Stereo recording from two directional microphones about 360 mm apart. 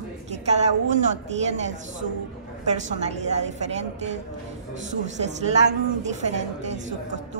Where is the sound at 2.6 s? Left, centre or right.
Centre.